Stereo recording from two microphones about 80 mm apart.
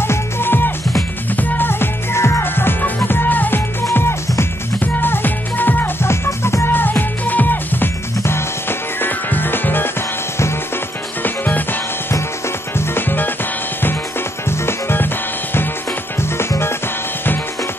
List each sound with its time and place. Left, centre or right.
0.0 s music: left
4.9 s music: left
11.2 s music: left
12.7 s music: left
14.7 s music: left
16.2 s music: left